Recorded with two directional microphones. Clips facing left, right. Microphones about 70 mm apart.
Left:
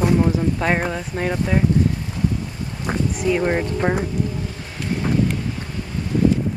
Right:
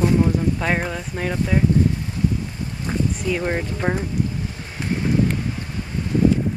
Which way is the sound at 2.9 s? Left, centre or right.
Left.